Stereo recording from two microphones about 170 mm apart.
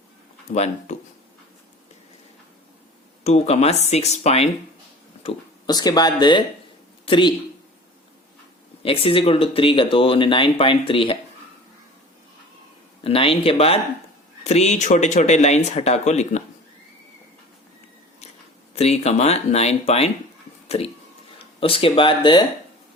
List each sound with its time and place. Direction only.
0.5 s speech: 40° left (ahead or behind)
3.2 s speech: 40° left (ahead or behind)
5.6 s speech: 25° left (ahead or behind)
8.8 s speech: 35° left (ahead or behind)
13.0 s speech: 35° left (ahead or behind)
18.7 s speech: 40° left (ahead or behind)